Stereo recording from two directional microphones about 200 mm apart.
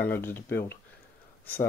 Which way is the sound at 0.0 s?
10° left (ahead or behind).